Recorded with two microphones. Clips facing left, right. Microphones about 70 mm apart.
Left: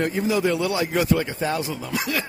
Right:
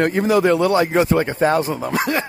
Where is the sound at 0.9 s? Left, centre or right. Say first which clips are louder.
Right 5 dB; right.